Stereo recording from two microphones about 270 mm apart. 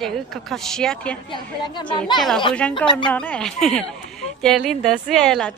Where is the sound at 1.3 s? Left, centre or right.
Centre.